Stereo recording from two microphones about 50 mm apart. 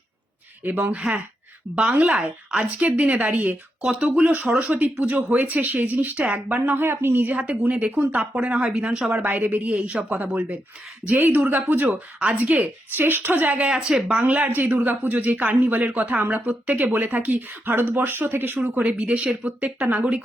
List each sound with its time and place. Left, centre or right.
0.6 s speech: right
1.9 s speech: right
4.7 s speech: right
6.7 s speech: right
7.3 s speech: right
9.1 s speech: right
9.7 s speech: right
12.2 s speech: right
12.9 s speech: right
13.7 s speech: centre
14.2 s speech: right
20.0 s speech: centre